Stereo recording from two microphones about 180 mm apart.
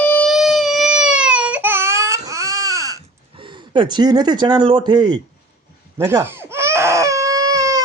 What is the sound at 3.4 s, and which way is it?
Speech, 25° right (ahead or behind).